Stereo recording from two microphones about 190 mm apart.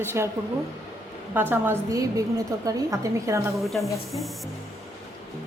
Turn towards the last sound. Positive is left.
turn(degrees=0)  # may be behind; listen again after turning